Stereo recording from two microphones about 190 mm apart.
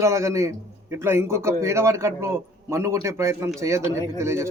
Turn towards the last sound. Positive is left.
turn(degrees=-15)  # may be behind; listen again after turning